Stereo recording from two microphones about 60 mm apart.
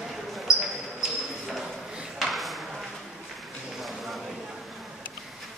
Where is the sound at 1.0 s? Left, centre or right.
Centre.